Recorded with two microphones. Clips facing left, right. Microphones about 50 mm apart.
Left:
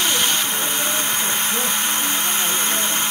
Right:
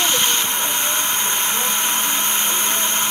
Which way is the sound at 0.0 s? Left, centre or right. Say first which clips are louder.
Right 1 dB; centre.